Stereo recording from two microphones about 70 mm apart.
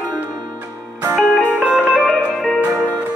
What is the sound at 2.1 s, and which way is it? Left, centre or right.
Music, centre.